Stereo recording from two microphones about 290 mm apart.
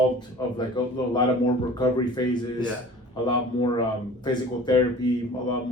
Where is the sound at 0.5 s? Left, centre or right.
Centre.